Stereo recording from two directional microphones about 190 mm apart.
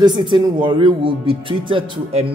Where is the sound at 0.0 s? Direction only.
25° right (ahead or behind).